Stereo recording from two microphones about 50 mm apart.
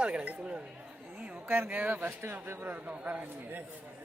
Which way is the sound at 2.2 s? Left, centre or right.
Right.